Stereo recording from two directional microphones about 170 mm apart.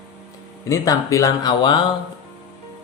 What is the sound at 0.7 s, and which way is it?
Speech, 20° left (ahead or behind).